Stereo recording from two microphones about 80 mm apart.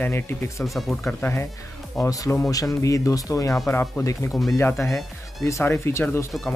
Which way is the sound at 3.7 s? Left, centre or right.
Left.